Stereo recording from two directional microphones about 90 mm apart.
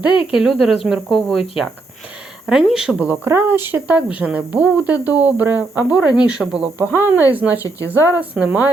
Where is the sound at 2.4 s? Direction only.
5° right (ahead or behind).